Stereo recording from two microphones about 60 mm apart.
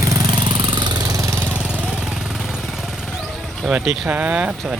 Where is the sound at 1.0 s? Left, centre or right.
Right.